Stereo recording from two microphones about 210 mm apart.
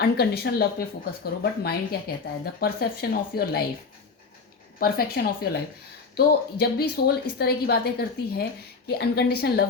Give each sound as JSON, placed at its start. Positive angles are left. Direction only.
{"t": 0.0, "sound": "a woman's voice", "side_deg": 50}
{"t": 4.8, "sound": "a woman's voice", "side_deg": 45}